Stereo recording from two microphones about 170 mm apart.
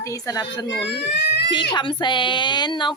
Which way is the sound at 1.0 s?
80° left.